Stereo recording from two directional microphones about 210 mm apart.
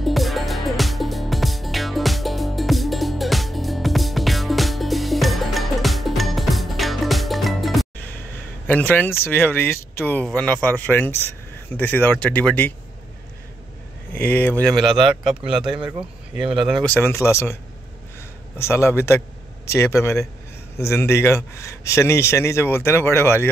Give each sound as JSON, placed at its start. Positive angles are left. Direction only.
{"t": 0.0, "sound": "music", "side_deg": 0}
{"t": 8.6, "sound": "speech", "side_deg": 5}
{"t": 14.1, "sound": "speech", "side_deg": 10}
{"t": 15.5, "sound": "speech", "side_deg": -25}
{"t": 16.5, "sound": "speech", "side_deg": 0}
{"t": 18.6, "sound": "speech", "side_deg": 10}